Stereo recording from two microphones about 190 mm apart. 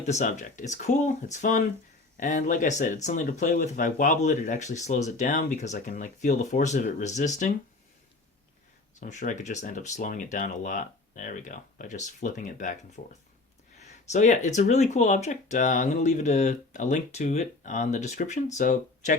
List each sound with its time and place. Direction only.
0.0 s speech: 40° left (ahead or behind)
9.0 s speech: 40° left (ahead or behind)